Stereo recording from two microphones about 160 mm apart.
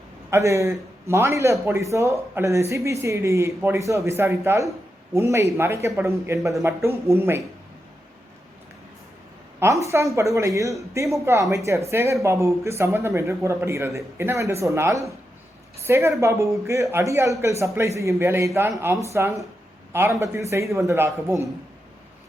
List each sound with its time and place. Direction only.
0.3 s a man's voice: 20° right (ahead or behind)
9.6 s a man's voice: 20° right (ahead or behind)